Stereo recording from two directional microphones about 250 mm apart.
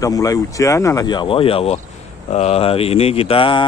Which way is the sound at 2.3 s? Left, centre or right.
Left.